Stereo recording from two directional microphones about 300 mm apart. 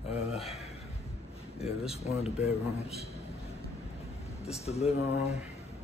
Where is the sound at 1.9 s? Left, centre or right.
Left.